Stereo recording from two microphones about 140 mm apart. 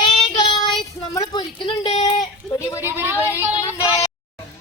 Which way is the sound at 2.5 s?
20° left (ahead or behind).